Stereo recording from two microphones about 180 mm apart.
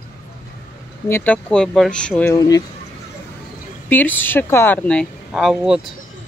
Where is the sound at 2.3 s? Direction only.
20° left (ahead or behind).